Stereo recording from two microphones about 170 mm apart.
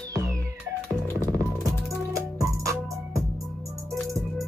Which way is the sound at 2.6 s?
20° right (ahead or behind).